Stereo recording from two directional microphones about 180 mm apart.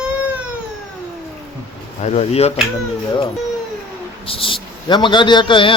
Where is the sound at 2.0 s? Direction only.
40° left (ahead or behind).